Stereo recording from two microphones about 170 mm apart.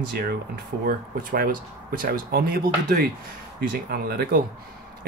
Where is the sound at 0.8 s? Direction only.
60° right (ahead or behind).